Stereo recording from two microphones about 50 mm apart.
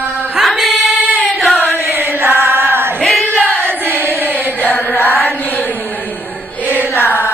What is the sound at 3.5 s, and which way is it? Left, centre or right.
Choir, right.